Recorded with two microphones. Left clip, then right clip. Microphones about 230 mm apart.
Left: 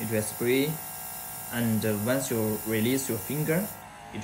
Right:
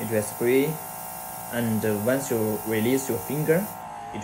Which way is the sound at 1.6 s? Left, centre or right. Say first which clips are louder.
Right 3 dB; centre.